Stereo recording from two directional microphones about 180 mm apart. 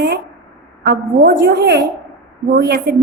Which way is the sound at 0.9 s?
65° right (ahead or behind).